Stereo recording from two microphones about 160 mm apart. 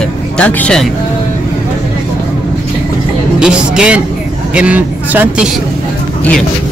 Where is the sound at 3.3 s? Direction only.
5° right (ahead or behind).